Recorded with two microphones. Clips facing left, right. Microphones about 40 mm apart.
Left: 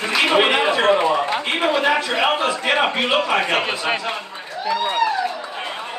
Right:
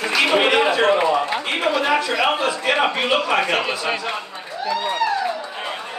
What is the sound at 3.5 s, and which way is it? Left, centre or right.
Speech, left.